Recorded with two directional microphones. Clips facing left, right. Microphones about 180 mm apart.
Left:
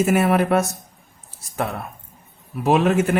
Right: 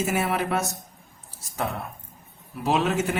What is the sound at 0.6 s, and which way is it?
Speech, centre (ahead or behind).